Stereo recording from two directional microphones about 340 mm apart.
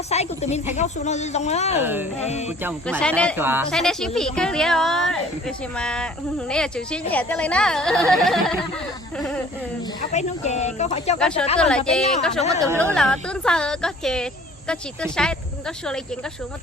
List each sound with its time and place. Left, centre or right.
0.1 s speech: centre
1.8 s speech: centre
2.1 s speech: centre
2.6 s speech: centre
10.1 s speech: centre
11.2 s speech: centre
11.4 s a woman's voice: centre
12.5 s speech: centre
12.9 s speech: centre